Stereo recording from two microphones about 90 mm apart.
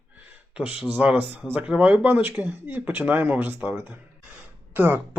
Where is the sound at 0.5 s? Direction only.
15° right (ahead or behind).